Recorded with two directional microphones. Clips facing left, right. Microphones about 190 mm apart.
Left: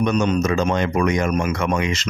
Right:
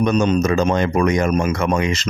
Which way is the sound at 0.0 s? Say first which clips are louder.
Right 2 dB; 30° right (ahead or behind).